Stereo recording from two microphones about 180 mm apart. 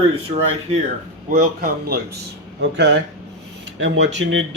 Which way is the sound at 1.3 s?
55° right (ahead or behind).